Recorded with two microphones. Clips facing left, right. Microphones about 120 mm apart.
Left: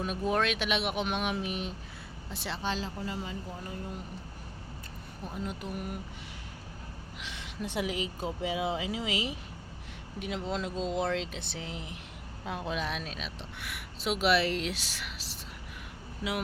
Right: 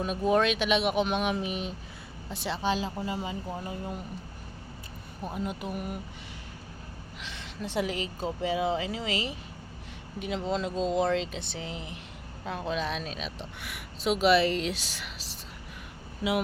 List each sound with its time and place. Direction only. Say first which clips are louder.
0.0 s speech: right 4 dB; centre (ahead or behind)
5.3 s speech: right 3 dB; 10° right (ahead or behind)
7.2 s speech: even; 10° left (ahead or behind)